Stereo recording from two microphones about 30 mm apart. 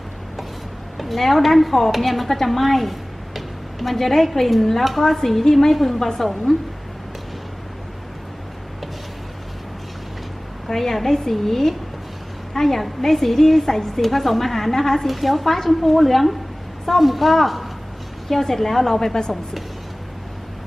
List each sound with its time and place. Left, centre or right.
0.9 s speech: centre
3.9 s a woman's voice: centre
10.7 s a woman's voice: centre
15.0 s a woman's voice: centre
18.9 s a woman's voice: centre